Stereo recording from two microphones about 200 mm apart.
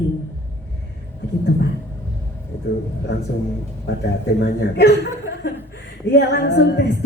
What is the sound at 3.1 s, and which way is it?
Speech, 60° left (ahead or behind).